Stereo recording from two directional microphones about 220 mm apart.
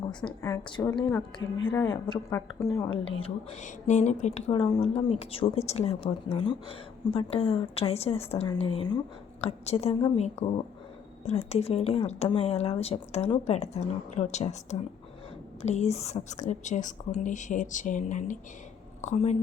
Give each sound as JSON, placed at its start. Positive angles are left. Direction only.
{"t": 0.3, "sound": "a woman's voice", "side_deg": 15}
{"t": 3.2, "sound": "a woman's voice", "side_deg": 30}